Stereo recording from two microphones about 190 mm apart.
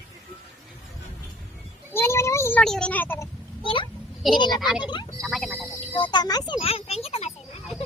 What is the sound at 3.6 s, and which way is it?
Speech, 25° left (ahead or behind).